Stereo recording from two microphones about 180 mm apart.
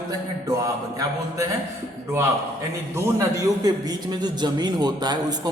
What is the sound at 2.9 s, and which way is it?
A man's voice, 15° right (ahead or behind).